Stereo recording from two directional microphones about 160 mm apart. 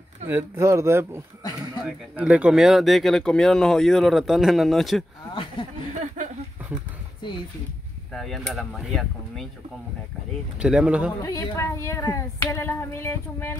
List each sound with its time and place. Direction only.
0.3 s speech: 15° right (ahead or behind); by 5.0 s centre (ahead or behind)
5.3 s speech: 30° left (ahead or behind)
5.9 s a sound: 50° right (ahead or behind)
8.1 s speech: centre (ahead or behind)
10.6 s speech: 5° right (ahead or behind)
11.2 s speech: 20° left (ahead or behind)